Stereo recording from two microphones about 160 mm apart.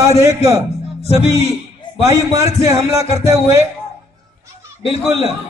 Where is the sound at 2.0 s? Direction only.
20° right (ahead or behind).